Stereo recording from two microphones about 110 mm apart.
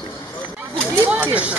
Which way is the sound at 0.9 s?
15° right (ahead or behind).